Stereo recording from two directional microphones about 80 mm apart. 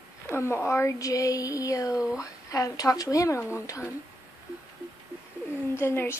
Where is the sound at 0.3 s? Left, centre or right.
Left.